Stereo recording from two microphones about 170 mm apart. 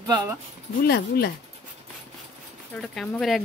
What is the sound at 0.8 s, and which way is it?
Speech, 65° left (ahead or behind).